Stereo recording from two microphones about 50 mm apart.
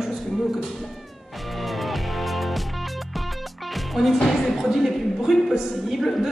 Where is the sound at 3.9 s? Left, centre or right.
Centre.